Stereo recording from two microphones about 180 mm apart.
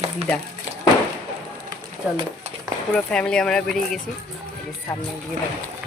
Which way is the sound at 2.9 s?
5° left (ahead or behind).